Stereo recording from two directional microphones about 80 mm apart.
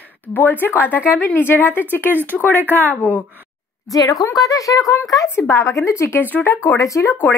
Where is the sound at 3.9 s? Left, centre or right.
Left.